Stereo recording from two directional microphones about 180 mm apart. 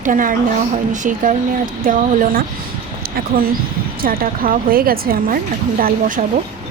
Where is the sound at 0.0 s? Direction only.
45° right (ahead or behind).